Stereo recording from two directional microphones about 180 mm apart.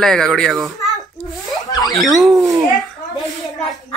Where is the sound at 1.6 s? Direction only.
20° left (ahead or behind).